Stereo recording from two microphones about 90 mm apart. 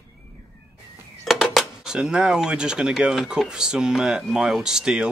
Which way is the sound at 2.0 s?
10° right (ahead or behind).